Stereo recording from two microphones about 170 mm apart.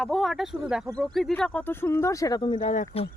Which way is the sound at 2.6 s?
45° left (ahead or behind).